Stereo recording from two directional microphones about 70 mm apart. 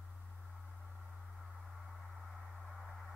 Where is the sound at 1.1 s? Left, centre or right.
Centre.